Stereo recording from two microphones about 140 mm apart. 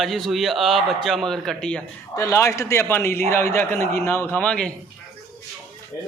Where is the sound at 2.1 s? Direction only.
20° left (ahead or behind).